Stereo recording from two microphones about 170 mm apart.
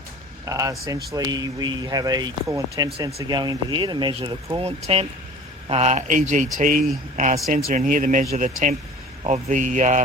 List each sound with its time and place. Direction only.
0.4 s speech: 20° right (ahead or behind); by 10.0 s 45° right (ahead or behind)